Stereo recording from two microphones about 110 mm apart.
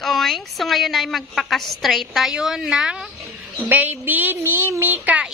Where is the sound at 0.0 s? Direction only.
Centre (ahead or behind).